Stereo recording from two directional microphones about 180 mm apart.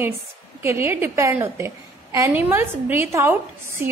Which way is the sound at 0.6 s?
15° right (ahead or behind).